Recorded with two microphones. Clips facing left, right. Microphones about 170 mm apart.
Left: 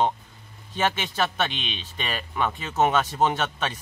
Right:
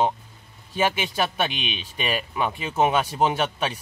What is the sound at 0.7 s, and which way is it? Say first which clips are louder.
Speech: right 2 dB; 10° right (ahead or behind).